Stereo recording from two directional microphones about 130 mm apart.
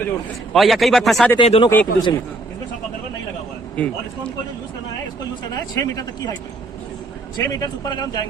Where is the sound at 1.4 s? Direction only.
45° left (ahead or behind).